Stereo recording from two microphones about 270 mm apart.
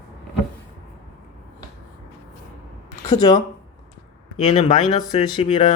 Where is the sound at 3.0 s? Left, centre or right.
Centre.